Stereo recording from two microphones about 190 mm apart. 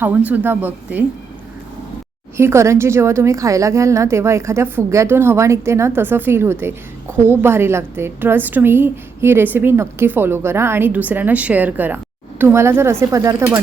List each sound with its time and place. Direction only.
0.3 s a woman's voice: 10° right (ahead or behind)
2.4 s a woman's voice: 15° right (ahead or behind)